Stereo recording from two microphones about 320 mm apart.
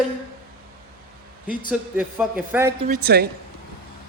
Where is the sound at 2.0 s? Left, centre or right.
Centre.